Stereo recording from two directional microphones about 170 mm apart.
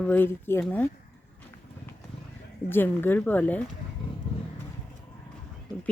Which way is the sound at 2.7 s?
10° left (ahead or behind).